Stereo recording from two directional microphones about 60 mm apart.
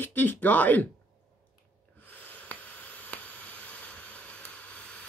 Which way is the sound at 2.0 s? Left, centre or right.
Left.